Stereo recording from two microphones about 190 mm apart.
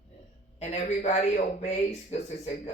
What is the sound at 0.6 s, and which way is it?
A man's voice, 35° left (ahead or behind).